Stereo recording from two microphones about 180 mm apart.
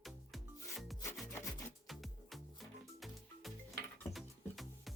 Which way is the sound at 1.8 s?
Centre (ahead or behind).